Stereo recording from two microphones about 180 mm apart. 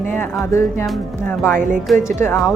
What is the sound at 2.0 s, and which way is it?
Music, 15° left (ahead or behind).